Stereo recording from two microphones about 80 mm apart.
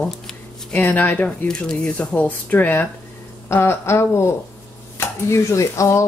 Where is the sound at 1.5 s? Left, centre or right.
Centre.